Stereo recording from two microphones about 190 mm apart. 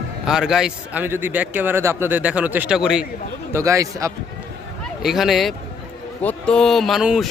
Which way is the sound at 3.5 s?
15° right (ahead or behind).